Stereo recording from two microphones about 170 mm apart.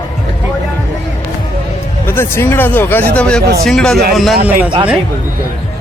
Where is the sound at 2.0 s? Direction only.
15° left (ahead or behind).